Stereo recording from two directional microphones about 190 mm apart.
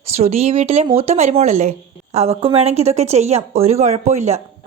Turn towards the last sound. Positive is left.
turn(degrees=-35)  # may be behind; listen again after turning